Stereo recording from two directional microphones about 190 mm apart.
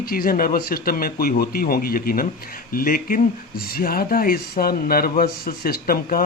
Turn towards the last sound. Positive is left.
turn(degrees=50)  # may be behind; listen again after turning